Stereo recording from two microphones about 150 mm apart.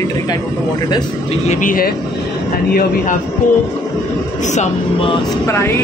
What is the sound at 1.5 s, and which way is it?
Speech, 60° left (ahead or behind).